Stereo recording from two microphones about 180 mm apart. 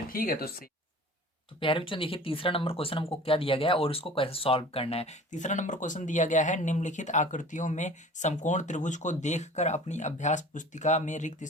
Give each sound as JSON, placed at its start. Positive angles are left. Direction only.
{"t": 0.1, "sound": "speech", "side_deg": 55}
{"t": 1.5, "sound": "speech", "side_deg": 30}